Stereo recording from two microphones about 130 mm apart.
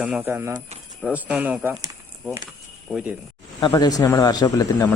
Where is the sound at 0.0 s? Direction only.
10° right (ahead or behind).